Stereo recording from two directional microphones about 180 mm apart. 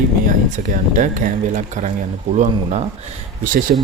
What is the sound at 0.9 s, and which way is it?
Speech, 45° right (ahead or behind).